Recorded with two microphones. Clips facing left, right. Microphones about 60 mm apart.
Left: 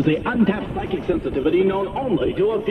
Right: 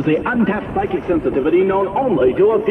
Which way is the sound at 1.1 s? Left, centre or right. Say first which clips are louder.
Right 4 dB; centre.